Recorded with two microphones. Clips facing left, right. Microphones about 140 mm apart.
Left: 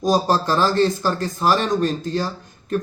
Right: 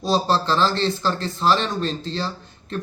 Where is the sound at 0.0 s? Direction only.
15° left (ahead or behind).